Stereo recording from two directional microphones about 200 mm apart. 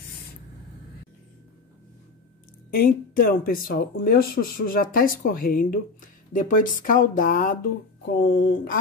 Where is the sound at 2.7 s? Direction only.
45° left (ahead or behind).